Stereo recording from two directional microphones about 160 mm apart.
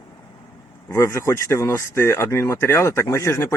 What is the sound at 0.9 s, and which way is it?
Speech, 20° left (ahead or behind).